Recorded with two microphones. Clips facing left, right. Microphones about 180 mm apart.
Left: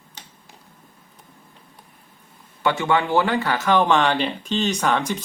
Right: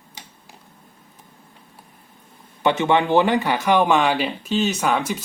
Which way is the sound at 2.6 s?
20° right (ahead or behind).